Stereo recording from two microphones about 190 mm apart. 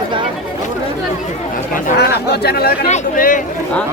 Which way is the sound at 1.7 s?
55° left (ahead or behind).